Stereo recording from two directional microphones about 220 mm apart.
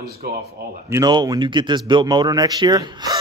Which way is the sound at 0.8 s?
15° right (ahead or behind).